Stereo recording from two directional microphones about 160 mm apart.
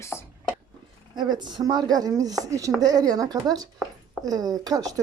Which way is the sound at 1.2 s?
25° right (ahead or behind).